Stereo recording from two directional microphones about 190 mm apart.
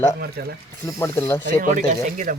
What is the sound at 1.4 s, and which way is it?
Speech, 45° right (ahead or behind).